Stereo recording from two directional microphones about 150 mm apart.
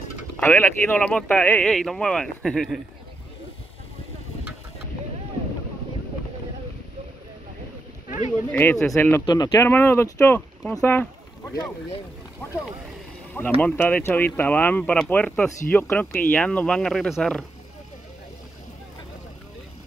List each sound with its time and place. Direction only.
0.4 s speech: 15° left (ahead or behind)
8.5 s speech: 10° left (ahead or behind)
9.2 s speech: 25° left (ahead or behind)
9.7 s speech: 15° left (ahead or behind)
10.7 s a sound: 10° left (ahead or behind)
13.6 s speech: 10° left (ahead or behind)